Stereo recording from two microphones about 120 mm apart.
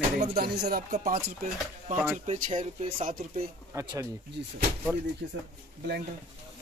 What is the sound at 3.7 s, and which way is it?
Speech, 25° right (ahead or behind).